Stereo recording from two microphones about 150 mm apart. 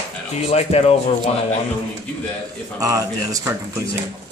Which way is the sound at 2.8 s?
25° right (ahead or behind).